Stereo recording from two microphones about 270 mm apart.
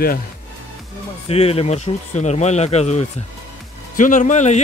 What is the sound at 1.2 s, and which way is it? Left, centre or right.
Speech, left.